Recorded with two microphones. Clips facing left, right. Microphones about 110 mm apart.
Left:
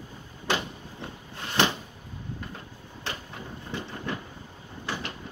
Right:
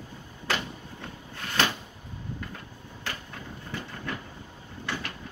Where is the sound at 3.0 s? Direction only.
20° left (ahead or behind).